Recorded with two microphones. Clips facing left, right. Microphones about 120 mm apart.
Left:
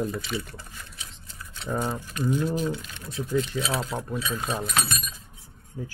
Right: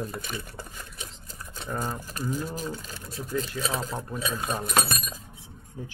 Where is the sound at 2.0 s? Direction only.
40° right (ahead or behind).